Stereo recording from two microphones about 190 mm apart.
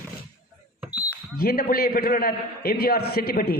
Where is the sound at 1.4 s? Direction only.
50° left (ahead or behind).